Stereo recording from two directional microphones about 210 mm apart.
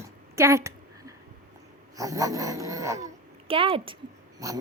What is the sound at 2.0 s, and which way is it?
Speech, 15° right (ahead or behind).